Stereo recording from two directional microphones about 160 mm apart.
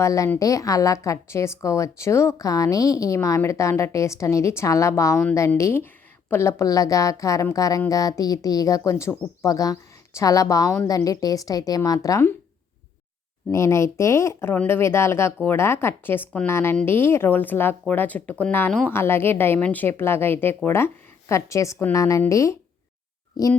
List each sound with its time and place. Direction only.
0.0 s speech: 20° left (ahead or behind)
13.5 s speech: 15° left (ahead or behind)